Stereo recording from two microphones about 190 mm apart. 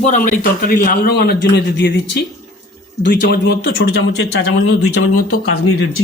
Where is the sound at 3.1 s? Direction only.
55° left (ahead or behind); by 4.8 s 90° left.